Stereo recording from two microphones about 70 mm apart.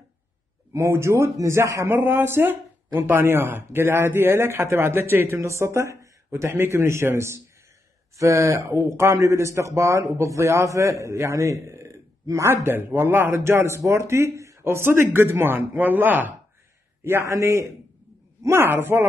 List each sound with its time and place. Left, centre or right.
0.7 s a man's voice: right
1.9 s a man's voice: right
14.6 s speech: right
17.0 s a man's voice: right